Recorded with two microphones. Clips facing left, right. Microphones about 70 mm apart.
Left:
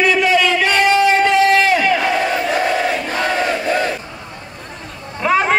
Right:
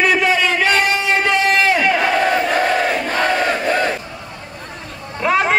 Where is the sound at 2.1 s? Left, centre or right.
Right.